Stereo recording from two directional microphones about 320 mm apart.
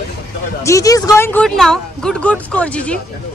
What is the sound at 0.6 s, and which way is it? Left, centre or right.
Speech, centre.